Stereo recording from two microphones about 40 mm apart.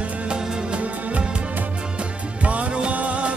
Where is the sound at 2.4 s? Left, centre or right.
Right.